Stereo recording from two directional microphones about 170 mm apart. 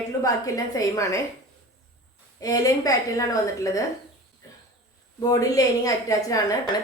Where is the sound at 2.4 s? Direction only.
20° left (ahead or behind).